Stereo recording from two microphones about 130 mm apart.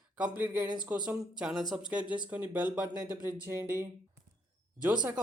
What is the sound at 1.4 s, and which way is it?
Speech, 5° right (ahead or behind).